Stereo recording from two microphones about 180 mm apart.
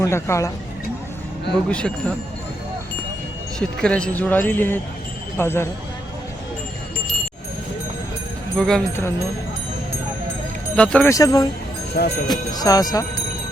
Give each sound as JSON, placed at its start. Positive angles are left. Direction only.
{"t": 0.0, "sound": "speech", "side_deg": 15}
{"t": 1.7, "sound": "speech", "side_deg": 5}
{"t": 3.6, "sound": "speech", "side_deg": 5}
{"t": 8.5, "sound": "speech", "side_deg": 5}
{"t": 10.8, "sound": "speech", "side_deg": 5}
{"t": 11.1, "sound": "speech", "side_deg": 20}
{"t": 12.0, "sound": "speech", "side_deg": 60}
{"t": 12.3, "sound": "speech", "side_deg": 20}